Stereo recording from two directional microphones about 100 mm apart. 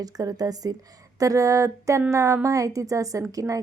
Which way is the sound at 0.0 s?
40° right (ahead or behind).